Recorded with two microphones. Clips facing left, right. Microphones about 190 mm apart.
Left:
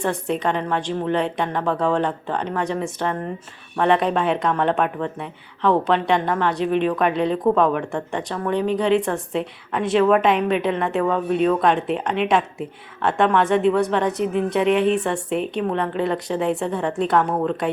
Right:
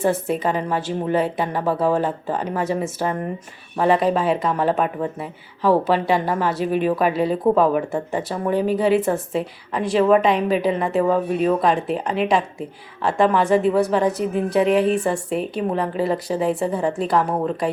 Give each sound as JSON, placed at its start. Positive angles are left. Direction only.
{"t": 0.0, "sound": "a woman's voice", "side_deg": -5}